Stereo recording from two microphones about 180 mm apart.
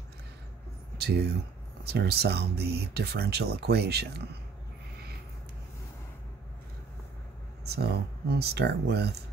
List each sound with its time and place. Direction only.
0.9 s speech: 65° right (ahead or behind)
7.6 s speech: 65° right (ahead or behind)